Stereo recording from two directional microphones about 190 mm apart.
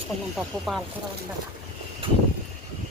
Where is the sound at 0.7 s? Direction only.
Centre (ahead or behind).